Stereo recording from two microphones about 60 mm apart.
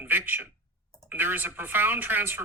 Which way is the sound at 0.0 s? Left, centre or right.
Right.